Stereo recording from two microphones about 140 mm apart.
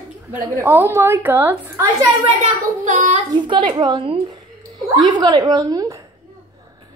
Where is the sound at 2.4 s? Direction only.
65° right (ahead or behind).